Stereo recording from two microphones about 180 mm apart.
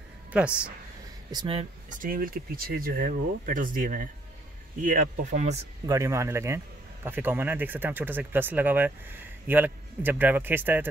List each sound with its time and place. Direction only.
0.3 s speech: 5° right (ahead or behind)
1.3 s speech: 30° right (ahead or behind)
1.9 s speech: 50° right (ahead or behind)
5.9 s speech: 15° right (ahead or behind)